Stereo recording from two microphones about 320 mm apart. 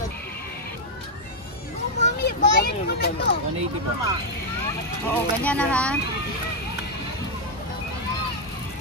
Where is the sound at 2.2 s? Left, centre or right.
Left.